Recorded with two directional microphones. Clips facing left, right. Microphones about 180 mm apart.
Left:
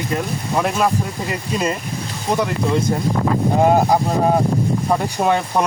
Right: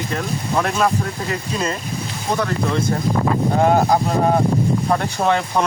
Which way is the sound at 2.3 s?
15° left (ahead or behind).